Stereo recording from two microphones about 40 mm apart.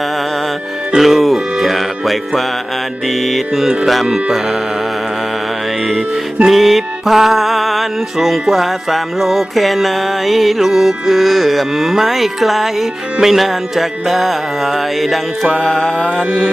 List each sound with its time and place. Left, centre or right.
0.9 s music: centre
6.4 s music: centre
15.6 s music: centre